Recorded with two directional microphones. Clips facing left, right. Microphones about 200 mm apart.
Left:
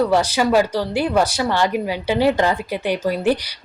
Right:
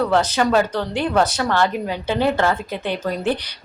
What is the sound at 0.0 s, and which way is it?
Speech, 10° left (ahead or behind).